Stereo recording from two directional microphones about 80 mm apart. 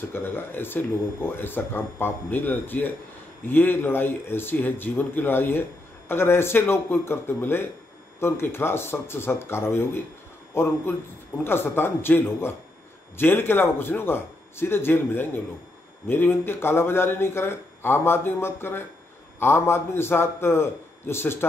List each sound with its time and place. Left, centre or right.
0.1 s a man's voice: left